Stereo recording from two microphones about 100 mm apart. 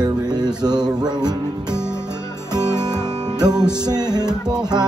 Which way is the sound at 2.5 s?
45° right (ahead or behind).